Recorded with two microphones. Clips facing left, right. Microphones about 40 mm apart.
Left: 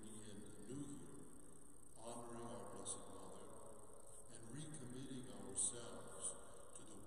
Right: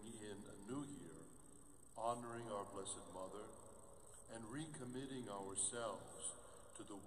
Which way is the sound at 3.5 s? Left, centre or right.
Centre.